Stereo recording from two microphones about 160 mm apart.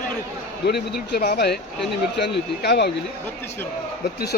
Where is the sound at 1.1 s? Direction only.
85° left.